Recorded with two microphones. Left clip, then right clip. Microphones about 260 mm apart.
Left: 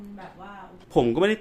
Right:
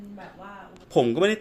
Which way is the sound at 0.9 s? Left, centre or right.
Centre.